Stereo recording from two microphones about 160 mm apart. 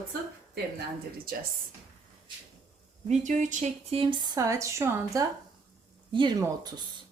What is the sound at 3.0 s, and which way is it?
A woman's voice, 50° right (ahead or behind).